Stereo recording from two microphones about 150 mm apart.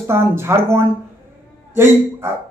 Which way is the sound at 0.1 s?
15° right (ahead or behind).